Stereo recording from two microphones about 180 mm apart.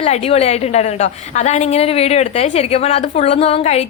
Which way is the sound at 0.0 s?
35° left (ahead or behind).